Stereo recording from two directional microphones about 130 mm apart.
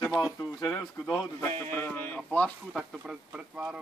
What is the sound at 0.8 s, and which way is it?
A man's voice, 25° left (ahead or behind).